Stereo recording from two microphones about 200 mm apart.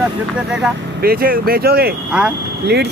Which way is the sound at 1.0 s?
50° right (ahead or behind).